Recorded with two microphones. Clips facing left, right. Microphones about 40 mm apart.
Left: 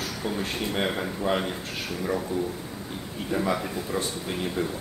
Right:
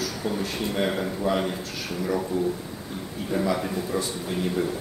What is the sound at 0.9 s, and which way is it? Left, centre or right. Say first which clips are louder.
Speech: right 2 dB; centre.